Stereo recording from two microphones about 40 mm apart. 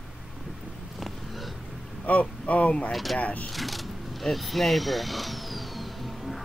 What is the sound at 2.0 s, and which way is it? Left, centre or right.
Speech, left.